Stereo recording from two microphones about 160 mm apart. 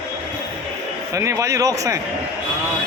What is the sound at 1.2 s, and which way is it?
Speech, 20° right (ahead or behind).